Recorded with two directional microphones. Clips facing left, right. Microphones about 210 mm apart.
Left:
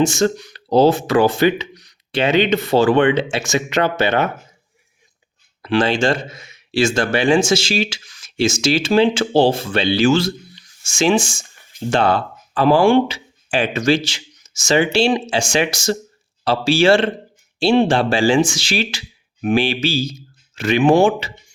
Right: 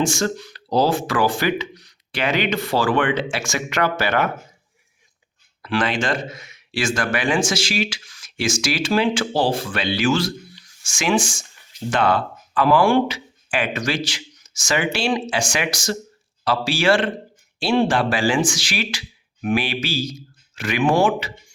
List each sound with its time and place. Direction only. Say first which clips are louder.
0.0 s speech: left 5 dB; 20° left (ahead or behind)
5.6 s speech: left 5 dB; 25° left (ahead or behind)